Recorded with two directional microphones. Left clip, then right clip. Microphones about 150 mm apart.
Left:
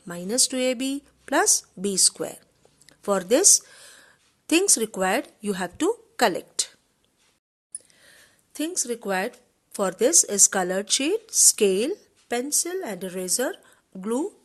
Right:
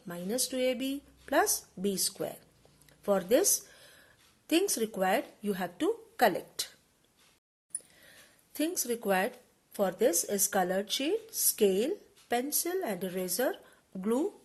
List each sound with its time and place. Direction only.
0.0 s a woman's voice: 45° left (ahead or behind)
7.9 s a sound: 30° left (ahead or behind)
9.7 s speech: 45° left (ahead or behind)